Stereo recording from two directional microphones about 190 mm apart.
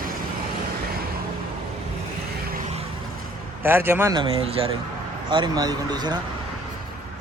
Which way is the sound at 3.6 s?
10° right (ahead or behind).